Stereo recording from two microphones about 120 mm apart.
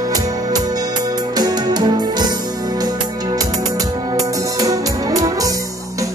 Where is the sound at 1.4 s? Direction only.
35° right (ahead or behind).